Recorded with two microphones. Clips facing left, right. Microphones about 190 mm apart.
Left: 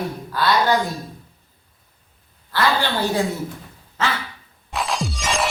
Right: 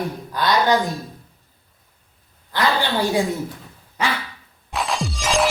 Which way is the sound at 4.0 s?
15° right (ahead or behind).